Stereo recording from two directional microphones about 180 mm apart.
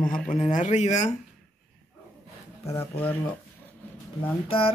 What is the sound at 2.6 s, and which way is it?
Speech, 15° left (ahead or behind).